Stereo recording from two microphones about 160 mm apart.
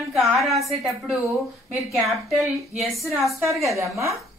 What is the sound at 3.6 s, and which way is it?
Speech, 20° right (ahead or behind).